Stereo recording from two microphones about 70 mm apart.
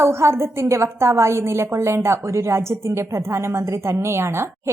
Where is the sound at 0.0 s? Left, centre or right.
Right.